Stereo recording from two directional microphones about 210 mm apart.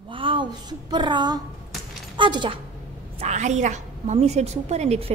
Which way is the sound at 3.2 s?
35° right (ahead or behind).